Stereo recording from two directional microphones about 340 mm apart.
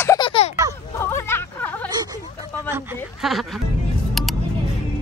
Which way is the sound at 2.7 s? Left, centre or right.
Centre.